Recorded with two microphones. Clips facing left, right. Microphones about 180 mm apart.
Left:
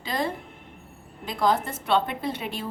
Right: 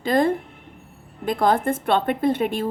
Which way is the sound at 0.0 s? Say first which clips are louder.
Right 9 dB; 50° right (ahead or behind).